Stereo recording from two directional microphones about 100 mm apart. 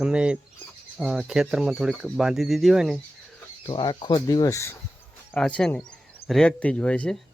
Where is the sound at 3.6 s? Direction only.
50° left (ahead or behind).